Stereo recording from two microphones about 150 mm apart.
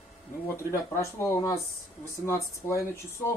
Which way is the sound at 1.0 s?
20° left (ahead or behind).